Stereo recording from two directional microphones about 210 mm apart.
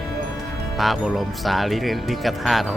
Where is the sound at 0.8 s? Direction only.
Centre (ahead or behind).